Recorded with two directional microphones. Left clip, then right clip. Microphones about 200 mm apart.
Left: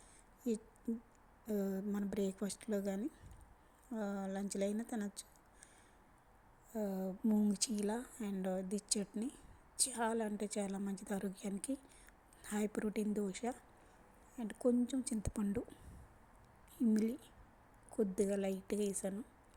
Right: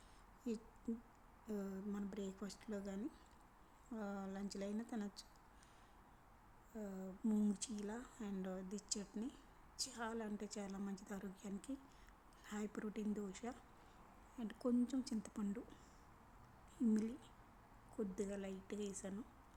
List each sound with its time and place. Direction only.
0.4 s a woman's voice: 15° left (ahead or behind)
6.7 s a woman's voice: 25° left (ahead or behind)
16.7 s a woman's voice: 20° left (ahead or behind)